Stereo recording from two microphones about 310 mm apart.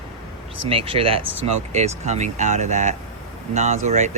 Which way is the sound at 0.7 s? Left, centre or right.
Centre.